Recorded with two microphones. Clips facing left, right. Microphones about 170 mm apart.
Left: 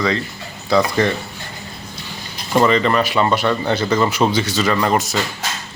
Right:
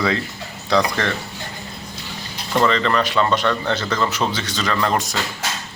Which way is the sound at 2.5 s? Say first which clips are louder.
Left 3 dB; 10° left (ahead or behind).